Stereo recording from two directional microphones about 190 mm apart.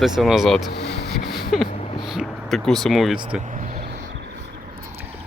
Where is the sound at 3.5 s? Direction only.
40° right (ahead or behind).